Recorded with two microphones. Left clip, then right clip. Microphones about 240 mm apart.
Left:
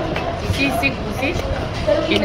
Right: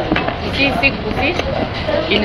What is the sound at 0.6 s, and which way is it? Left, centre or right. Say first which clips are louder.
Speech: right 4 dB; centre.